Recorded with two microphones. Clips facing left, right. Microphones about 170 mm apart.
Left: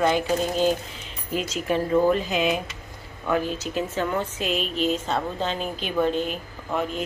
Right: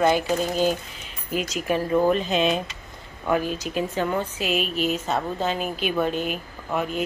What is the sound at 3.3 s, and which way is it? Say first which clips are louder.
A woman's voice: right 1 dB; 15° right (ahead or behind).